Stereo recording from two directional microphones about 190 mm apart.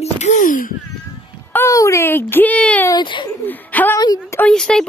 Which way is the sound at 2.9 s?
25° left (ahead or behind).